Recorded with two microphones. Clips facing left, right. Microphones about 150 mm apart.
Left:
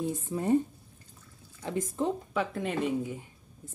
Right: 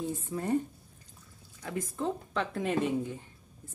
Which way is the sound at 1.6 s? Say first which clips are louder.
Left 4 dB; 25° left (ahead or behind).